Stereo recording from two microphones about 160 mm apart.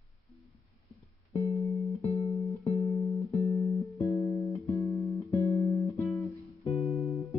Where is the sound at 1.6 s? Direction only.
20° left (ahead or behind).